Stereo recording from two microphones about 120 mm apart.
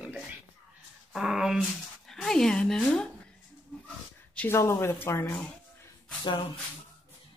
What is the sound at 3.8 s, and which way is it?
Dog, 10° left (ahead or behind).